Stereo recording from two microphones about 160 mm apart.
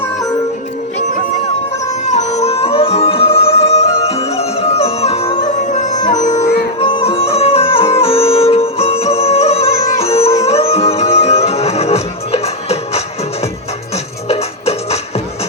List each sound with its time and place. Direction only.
2.0 s music: 45° left (ahead or behind)
5.5 s music: 50° left (ahead or behind)
6.7 s music: 35° left (ahead or behind)
14.3 s music: 40° left (ahead or behind)